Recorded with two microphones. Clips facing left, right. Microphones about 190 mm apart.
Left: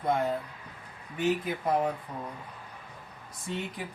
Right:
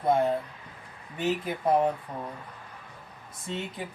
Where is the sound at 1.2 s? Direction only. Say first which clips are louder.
Even; 30° right (ahead or behind).